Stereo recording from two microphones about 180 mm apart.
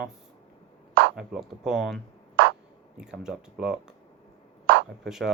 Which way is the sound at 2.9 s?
5° right (ahead or behind).